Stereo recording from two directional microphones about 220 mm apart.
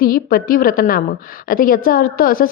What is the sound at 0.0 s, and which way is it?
A woman's voice, 40° left (ahead or behind).